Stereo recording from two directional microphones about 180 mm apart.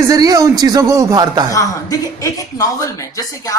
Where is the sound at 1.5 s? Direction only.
15° left (ahead or behind).